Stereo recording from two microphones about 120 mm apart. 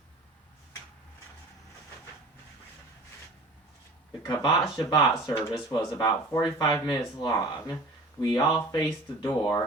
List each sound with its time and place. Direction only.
4.3 s speech: 30° left (ahead or behind)